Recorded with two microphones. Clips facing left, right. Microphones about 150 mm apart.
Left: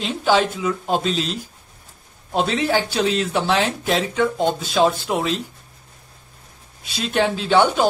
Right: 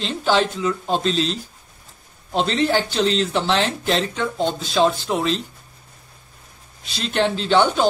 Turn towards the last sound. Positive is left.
turn(degrees=5)  # may be behind; listen again after turning